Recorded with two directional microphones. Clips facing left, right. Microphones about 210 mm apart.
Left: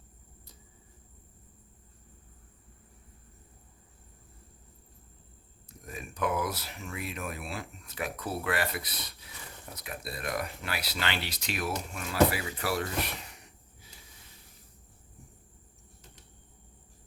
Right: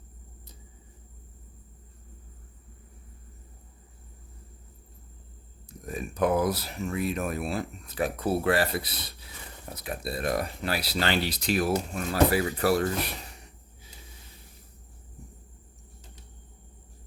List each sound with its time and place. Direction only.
5.8 s speech: 35° right (ahead or behind)